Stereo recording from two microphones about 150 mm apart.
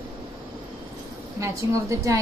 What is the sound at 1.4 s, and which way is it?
Speech, 20° right (ahead or behind).